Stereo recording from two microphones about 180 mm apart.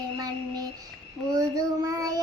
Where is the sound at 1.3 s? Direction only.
20° right (ahead or behind).